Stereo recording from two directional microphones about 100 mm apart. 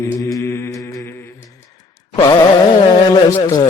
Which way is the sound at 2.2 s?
45° left (ahead or behind).